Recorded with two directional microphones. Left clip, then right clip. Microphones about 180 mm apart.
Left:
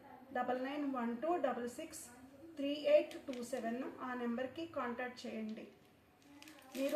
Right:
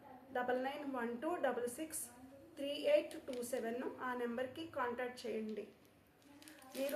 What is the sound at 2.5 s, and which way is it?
A woman's voice, 50° right (ahead or behind).